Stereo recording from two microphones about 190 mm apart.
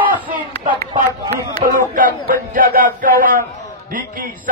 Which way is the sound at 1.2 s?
20° right (ahead or behind).